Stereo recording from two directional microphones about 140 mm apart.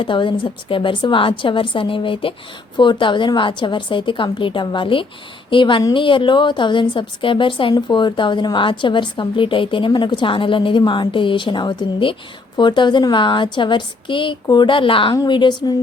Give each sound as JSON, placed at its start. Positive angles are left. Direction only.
{"t": 0.0, "sound": "a woman's voice", "side_deg": 35}